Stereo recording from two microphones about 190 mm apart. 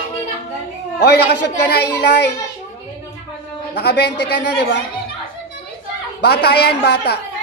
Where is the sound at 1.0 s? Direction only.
60° left (ahead or behind).